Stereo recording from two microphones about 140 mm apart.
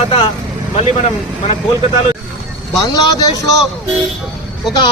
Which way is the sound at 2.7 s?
25° left (ahead or behind).